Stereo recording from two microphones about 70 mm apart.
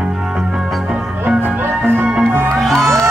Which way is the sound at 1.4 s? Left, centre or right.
Right.